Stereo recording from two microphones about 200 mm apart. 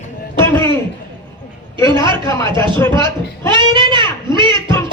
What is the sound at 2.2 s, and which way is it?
Speech, 15° left (ahead or behind).